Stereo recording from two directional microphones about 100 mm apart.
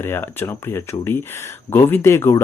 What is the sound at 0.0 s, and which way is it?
A man's voice, 25° left (ahead or behind).